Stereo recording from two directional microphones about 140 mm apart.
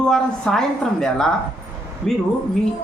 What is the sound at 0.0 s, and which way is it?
A woman's voice, 5° left (ahead or behind).